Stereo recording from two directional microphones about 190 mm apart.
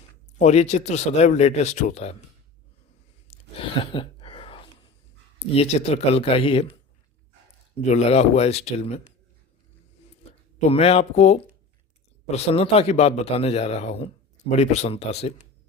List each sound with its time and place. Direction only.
0.3 s a man's voice: 35° left (ahead or behind)
3.2 s a sound: 30° left (ahead or behind)
5.5 s a man's voice: 35° left (ahead or behind)
7.9 s a man's voice: 35° left (ahead or behind)
10.7 s a man's voice: 30° left (ahead or behind)